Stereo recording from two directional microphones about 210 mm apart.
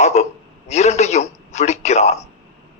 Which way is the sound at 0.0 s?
30° left (ahead or behind).